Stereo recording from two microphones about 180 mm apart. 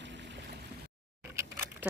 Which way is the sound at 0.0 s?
75° right (ahead or behind).